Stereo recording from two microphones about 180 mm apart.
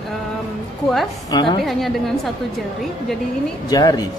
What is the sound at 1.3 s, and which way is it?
Speech, 25° left (ahead or behind).